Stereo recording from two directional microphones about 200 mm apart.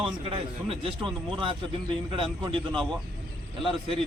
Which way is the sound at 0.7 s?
25° right (ahead or behind).